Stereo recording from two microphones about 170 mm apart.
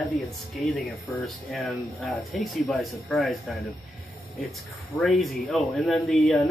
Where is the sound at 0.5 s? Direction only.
Centre (ahead or behind).